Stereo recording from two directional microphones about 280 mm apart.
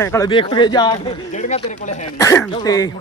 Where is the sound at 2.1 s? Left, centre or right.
Centre.